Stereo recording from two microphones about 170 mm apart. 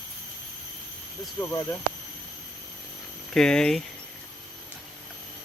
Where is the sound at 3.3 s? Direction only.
5° left (ahead or behind).